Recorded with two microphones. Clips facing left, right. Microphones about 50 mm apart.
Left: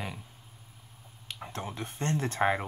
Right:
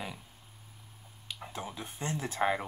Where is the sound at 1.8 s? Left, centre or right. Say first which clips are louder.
Left 6 dB; centre.